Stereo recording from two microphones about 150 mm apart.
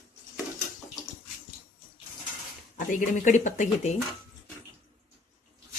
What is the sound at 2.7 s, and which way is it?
Speech, 60° left (ahead or behind).